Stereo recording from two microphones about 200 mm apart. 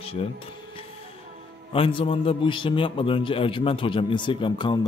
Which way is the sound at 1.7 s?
30° left (ahead or behind).